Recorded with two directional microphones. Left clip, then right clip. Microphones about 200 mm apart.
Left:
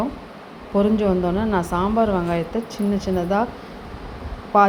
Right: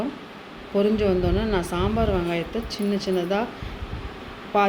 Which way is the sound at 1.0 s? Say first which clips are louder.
Left 2 dB; 5° left (ahead or behind).